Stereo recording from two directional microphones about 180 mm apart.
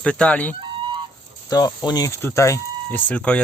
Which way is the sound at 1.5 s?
20° left (ahead or behind).